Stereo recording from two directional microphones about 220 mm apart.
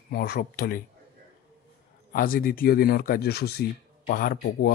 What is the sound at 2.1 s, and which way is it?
Speech, 40° left (ahead or behind).